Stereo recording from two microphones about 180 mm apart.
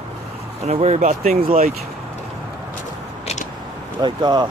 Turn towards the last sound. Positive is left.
turn(degrees=-25)  # may be behind; listen again after turning